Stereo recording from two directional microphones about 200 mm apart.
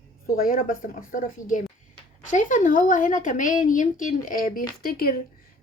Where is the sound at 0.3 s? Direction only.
45° left (ahead or behind).